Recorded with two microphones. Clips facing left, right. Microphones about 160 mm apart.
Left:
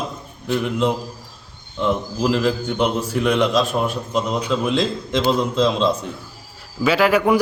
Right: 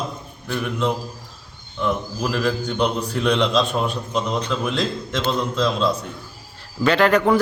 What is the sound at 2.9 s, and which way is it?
A man's voice, 5° left (ahead or behind).